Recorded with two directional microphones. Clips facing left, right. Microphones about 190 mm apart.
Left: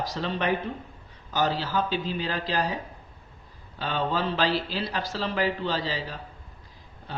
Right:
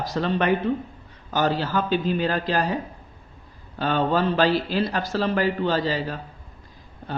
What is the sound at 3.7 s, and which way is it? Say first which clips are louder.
Speech: right 6 dB; 50° right (ahead or behind).